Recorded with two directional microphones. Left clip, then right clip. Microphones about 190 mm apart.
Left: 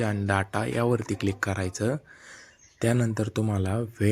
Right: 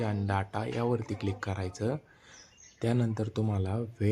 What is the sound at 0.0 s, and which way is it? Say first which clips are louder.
Speech: left 6 dB; 15° left (ahead or behind).